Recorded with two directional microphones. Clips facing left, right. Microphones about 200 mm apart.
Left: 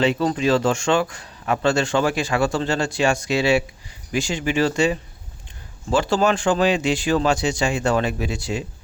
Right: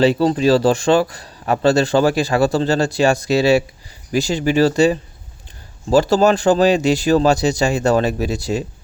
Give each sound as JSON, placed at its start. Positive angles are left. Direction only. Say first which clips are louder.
{"t": 0.0, "sound": "speech", "louder": "right 5 dB", "side_deg": -35}